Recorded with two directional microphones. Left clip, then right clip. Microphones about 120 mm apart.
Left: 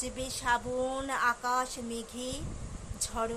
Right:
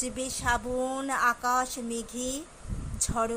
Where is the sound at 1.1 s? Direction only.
30° right (ahead or behind).